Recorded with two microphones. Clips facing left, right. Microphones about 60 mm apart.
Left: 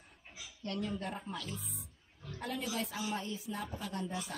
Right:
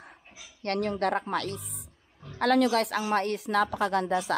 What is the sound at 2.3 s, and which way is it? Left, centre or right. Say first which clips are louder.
A woman's voice: right 15 dB; right.